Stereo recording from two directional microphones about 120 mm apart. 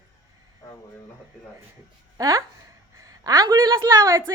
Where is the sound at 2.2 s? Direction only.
30° right (ahead or behind).